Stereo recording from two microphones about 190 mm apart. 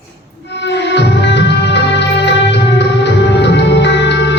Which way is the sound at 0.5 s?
65° left (ahead or behind).